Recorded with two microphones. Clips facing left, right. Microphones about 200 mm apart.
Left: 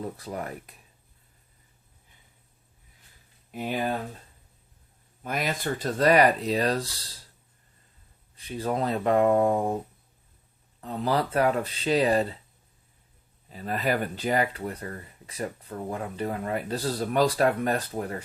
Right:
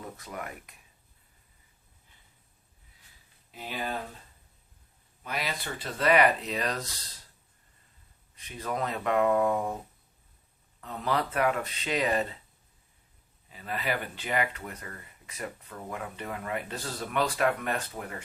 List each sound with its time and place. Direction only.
0.0 s speech: 35° left (ahead or behind)
3.5 s speech: 50° left (ahead or behind)
5.2 s speech: 45° left (ahead or behind)
8.4 s speech: 30° left (ahead or behind)
10.8 s speech: 30° left (ahead or behind)
13.5 s speech: 40° left (ahead or behind)